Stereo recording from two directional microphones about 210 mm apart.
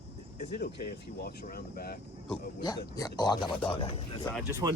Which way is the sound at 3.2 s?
20° left (ahead or behind).